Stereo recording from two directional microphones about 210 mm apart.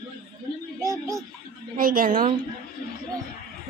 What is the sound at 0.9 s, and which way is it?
Music, 15° right (ahead or behind).